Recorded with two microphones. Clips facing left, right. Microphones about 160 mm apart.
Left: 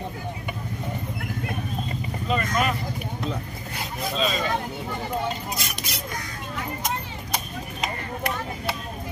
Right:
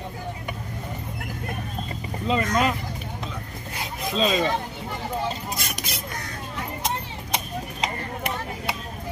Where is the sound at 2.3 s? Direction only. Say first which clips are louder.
Right 2 dB; 25° right (ahead or behind).